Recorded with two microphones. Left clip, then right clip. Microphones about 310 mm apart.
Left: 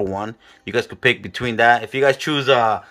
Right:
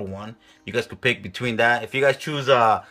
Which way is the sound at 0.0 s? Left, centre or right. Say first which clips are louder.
Left 10 dB; centre.